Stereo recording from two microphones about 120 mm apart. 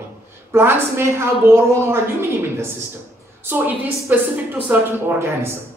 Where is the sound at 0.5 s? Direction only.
20° right (ahead or behind).